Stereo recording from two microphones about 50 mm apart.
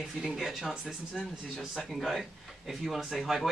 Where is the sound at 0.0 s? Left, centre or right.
Centre.